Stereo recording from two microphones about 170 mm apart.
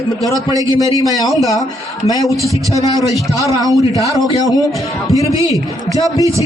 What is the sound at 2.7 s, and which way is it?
A man's voice, 20° right (ahead or behind).